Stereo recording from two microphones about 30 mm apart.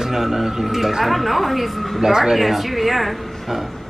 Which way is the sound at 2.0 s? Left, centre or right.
Centre.